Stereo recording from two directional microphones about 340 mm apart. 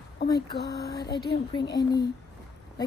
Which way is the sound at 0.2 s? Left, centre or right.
Left.